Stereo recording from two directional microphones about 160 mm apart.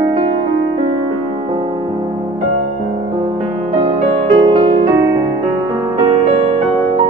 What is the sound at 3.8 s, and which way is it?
Music, 40° right (ahead or behind).